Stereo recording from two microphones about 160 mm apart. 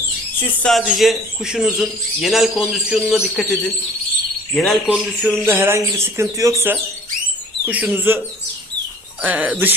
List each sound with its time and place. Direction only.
0.6 s speech: centre (ahead or behind)
5.5 s speech: 15° right (ahead or behind)
9.2 s speech: 10° right (ahead or behind)